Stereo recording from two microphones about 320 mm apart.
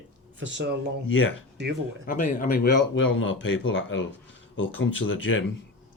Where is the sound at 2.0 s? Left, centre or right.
Left.